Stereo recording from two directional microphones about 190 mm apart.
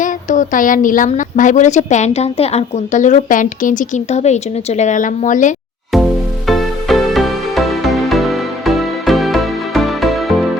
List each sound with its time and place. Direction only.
0.0 s speech: 40° left (ahead or behind)
6.5 s music: centre (ahead or behind)